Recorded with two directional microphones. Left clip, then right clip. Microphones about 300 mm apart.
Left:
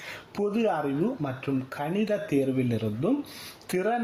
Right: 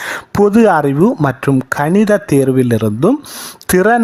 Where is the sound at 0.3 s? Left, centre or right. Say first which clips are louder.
Right 17 dB; right.